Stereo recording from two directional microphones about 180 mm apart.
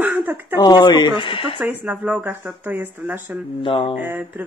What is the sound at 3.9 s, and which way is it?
Speech, 10° right (ahead or behind).